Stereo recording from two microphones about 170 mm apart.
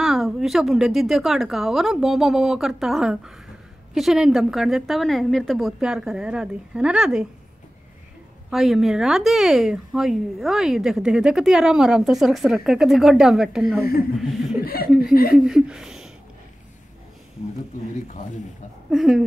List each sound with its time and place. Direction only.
0.0 s speech: centre (ahead or behind)
8.5 s speech: centre (ahead or behind)
14.6 s speech: 60° left (ahead or behind)
15.3 s a sound: centre (ahead or behind)
18.9 s speech: centre (ahead or behind)